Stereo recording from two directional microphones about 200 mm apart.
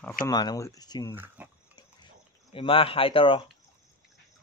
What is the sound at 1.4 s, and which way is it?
Pig, 10° right (ahead or behind).